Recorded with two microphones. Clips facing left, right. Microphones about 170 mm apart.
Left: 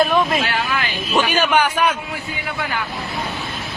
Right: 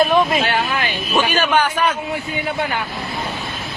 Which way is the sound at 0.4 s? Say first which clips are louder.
Right 2 dB; 25° right (ahead or behind).